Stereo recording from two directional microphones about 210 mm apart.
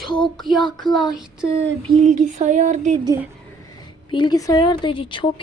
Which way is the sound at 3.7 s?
20° left (ahead or behind).